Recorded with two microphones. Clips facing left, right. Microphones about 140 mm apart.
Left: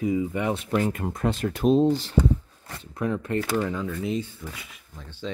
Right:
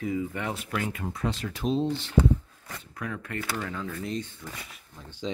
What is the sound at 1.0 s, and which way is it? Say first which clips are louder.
Speech: left 5 dB; 55° left (ahead or behind).